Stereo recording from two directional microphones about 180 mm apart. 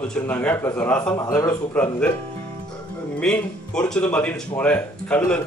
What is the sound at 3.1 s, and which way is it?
A man's voice, 5° left (ahead or behind).